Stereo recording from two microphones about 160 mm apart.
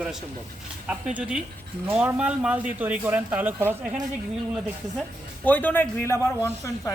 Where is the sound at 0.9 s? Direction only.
5° right (ahead or behind).